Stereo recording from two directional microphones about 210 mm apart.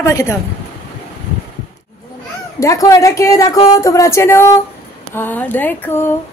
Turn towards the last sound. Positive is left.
turn(degrees=10)  # may be behind; listen again after turning